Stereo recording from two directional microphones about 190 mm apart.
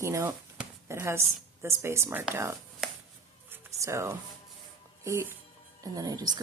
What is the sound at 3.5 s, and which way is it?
Music, 15° right (ahead or behind).